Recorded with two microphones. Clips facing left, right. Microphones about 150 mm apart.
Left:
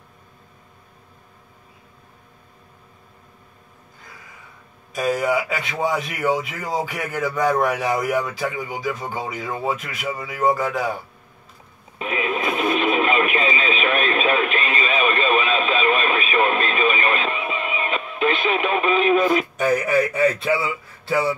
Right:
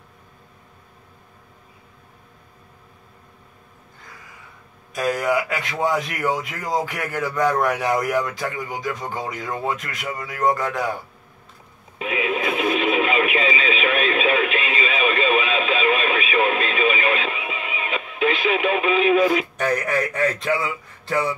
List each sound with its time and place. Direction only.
4.9 s a man's voice: centre (ahead or behind)
12.0 s radio: 40° left (ahead or behind)
19.5 s a man's voice: 5° left (ahead or behind)